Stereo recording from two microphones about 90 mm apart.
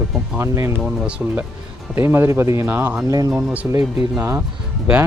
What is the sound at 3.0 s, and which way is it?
Speech, 40° right (ahead or behind).